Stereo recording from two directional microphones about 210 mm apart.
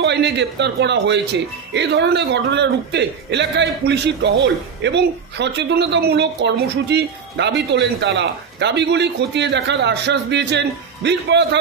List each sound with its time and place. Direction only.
0.0 s speech: 55° right (ahead or behind)